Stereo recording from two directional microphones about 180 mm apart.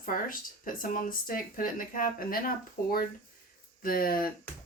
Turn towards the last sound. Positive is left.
turn(degrees=55)  # may be behind; listen again after turning